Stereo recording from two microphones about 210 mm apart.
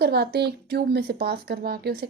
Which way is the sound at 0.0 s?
50° right (ahead or behind).